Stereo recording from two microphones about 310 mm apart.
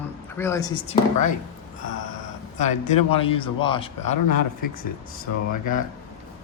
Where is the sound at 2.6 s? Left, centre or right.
Left.